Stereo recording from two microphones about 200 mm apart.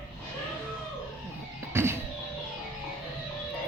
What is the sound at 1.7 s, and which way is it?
Music, 10° right (ahead or behind).